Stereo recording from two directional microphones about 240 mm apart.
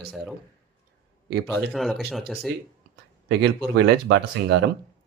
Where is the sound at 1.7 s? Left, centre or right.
Centre.